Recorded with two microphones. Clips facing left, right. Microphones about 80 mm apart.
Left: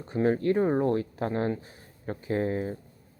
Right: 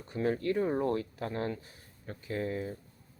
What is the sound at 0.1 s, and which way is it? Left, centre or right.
Speech, left.